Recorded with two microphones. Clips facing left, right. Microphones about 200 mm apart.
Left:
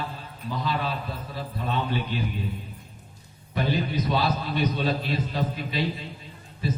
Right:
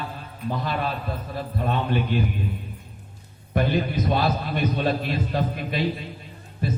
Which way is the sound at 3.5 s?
50° right (ahead or behind).